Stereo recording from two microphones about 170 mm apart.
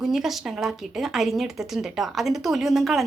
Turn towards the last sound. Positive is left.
turn(degrees=0)  # may be behind; listen again after turning